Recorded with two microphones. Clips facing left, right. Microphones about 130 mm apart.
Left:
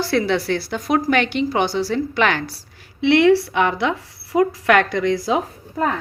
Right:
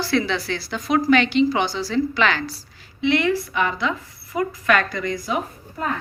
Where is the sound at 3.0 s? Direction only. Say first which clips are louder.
Left 6 dB; 75° left (ahead or behind).